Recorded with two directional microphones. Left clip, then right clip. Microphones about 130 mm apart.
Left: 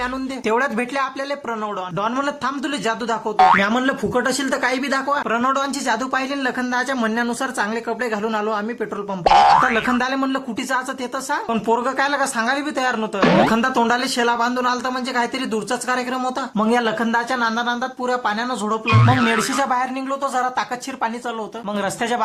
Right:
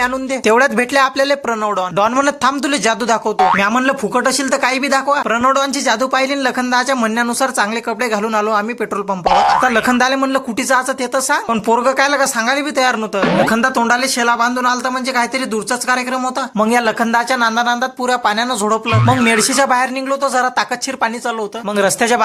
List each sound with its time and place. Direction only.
0.0 s speech: 35° right (ahead or behind)
3.3 s speech: centre (ahead or behind)
3.7 s speech: 25° right (ahead or behind)
9.2 s speech: centre (ahead or behind)
9.7 s speech: 25° right (ahead or behind)
13.1 s speech: centre (ahead or behind)
13.5 s speech: 15° right (ahead or behind)
16.6 s speech: 25° right (ahead or behind)
18.9 s speech: centre (ahead or behind)
19.5 s speech: 35° right (ahead or behind)